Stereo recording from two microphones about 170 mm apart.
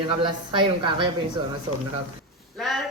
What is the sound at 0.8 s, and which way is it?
Speech, 30° right (ahead or behind).